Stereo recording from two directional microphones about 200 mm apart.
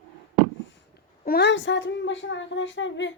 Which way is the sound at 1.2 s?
50° left (ahead or behind).